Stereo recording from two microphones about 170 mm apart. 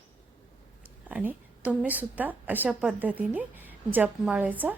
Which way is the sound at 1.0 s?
10° right (ahead or behind).